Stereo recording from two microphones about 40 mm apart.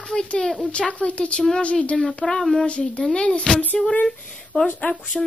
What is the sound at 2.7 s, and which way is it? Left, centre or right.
Speech, left.